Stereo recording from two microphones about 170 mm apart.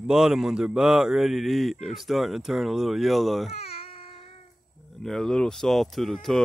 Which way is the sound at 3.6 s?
35° left (ahead or behind).